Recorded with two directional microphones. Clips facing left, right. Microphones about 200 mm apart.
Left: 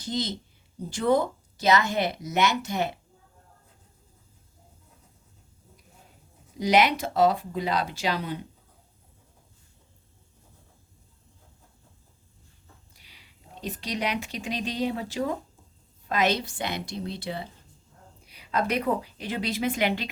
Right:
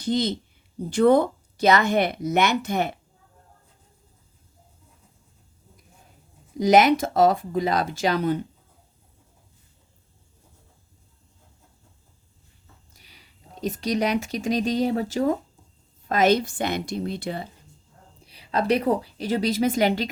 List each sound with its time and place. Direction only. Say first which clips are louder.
0.0 s speech: right 7 dB; 60° right (ahead or behind)
6.6 s speech: right 5 dB; 45° right (ahead or behind)
12.9 s speech: right 2 dB; 45° right (ahead or behind)
18.3 s a woman's voice: right 5 dB; 30° right (ahead or behind)